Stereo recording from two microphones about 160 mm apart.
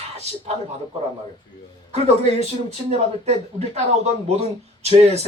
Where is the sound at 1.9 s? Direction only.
45° right (ahead or behind).